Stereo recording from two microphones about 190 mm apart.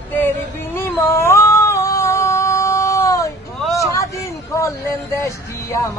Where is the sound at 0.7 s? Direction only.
10° left (ahead or behind).